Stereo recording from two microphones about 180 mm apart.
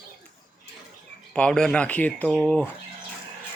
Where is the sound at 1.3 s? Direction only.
5° left (ahead or behind).